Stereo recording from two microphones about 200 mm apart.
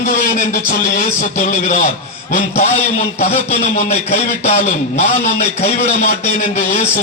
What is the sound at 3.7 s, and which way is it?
Speech, 35° left (ahead or behind).